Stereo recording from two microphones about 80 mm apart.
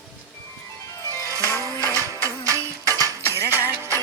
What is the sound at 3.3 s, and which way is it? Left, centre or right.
Music, right.